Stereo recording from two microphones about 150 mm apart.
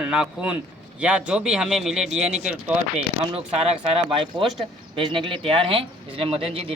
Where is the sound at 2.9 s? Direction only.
45° right (ahead or behind).